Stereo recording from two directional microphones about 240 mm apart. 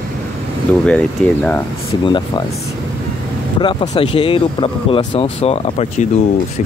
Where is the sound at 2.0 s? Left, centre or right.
Centre.